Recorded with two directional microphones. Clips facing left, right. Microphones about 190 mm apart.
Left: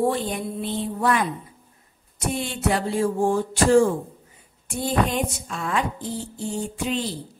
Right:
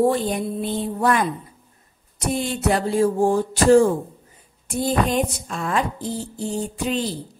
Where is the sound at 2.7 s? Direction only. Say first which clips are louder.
Right 3 dB; 40° right (ahead or behind).